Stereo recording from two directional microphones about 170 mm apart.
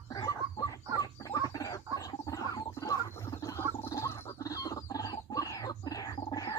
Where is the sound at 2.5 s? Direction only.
20° left (ahead or behind).